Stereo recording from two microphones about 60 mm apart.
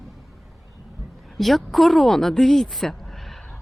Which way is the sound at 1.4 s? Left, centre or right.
Centre.